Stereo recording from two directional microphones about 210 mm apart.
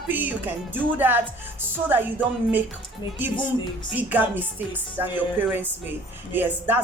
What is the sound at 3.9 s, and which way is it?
Speech, 10° right (ahead or behind).